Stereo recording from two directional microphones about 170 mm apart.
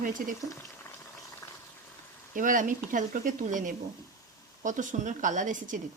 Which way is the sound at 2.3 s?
50° right (ahead or behind).